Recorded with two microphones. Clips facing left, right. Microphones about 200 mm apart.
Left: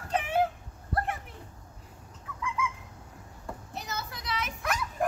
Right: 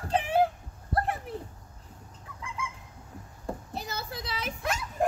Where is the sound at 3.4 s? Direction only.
30° right (ahead or behind).